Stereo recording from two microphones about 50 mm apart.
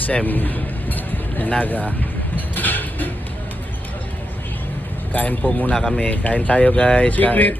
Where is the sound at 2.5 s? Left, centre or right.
Left.